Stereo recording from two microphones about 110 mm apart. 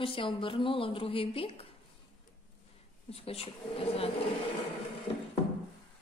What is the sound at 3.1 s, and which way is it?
Speech, 60° left (ahead or behind).